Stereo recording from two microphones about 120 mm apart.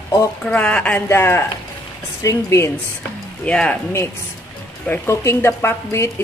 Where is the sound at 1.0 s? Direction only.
20° left (ahead or behind).